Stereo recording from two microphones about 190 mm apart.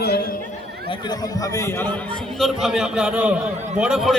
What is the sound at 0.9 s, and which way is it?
A man's voice, 20° left (ahead or behind).